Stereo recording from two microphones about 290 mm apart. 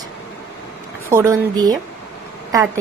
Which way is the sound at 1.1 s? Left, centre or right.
Centre.